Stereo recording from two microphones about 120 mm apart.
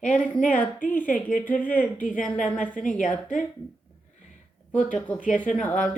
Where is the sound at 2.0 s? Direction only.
90° left.